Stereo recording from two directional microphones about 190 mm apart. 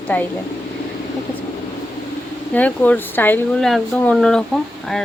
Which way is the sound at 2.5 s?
10° left (ahead or behind).